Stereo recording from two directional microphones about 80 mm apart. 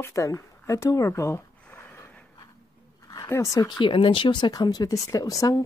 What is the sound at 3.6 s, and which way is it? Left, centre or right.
Speech, left.